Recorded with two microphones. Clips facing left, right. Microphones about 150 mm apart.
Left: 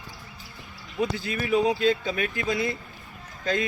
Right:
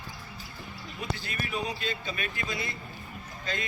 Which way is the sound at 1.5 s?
90° left.